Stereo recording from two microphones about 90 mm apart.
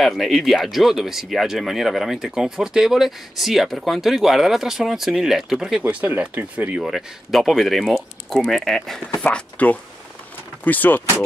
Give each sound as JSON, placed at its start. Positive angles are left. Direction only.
{"t": 0.0, "sound": "speech", "side_deg": 0}
{"t": 5.8, "sound": "speech", "side_deg": -15}
{"t": 6.9, "sound": "speech", "side_deg": -5}
{"t": 9.2, "sound": "speech", "side_deg": 15}